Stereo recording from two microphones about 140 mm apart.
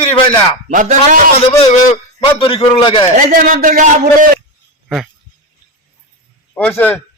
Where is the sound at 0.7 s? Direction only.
65° right (ahead or behind).